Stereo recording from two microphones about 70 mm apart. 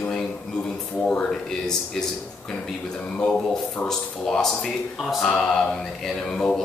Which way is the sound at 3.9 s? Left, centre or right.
Centre.